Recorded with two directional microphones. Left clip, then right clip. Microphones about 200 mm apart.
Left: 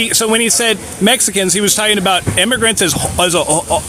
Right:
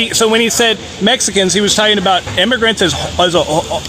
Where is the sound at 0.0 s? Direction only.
20° left (ahead or behind).